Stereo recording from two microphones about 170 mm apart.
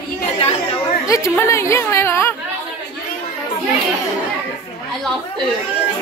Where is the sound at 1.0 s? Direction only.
20° left (ahead or behind).